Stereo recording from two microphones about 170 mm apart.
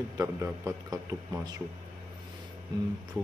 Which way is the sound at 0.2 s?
20° right (ahead or behind).